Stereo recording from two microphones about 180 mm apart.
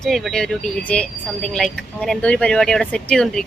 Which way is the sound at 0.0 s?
Centre (ahead or behind).